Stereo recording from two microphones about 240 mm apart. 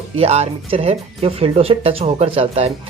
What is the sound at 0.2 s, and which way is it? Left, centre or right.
Speech, right.